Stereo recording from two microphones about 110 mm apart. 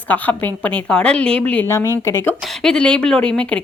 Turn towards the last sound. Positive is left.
turn(degrees=10)  # may be behind; listen again after turning